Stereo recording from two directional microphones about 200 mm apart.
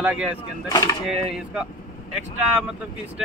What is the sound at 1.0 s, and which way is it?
Speech, centre (ahead or behind).